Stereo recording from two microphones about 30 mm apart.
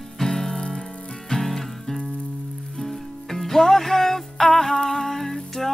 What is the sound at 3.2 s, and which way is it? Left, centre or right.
Music, centre.